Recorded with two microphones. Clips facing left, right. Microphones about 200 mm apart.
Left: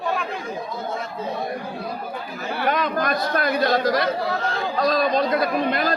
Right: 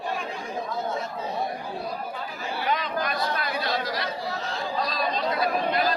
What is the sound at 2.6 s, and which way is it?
Speech, 50° left (ahead or behind).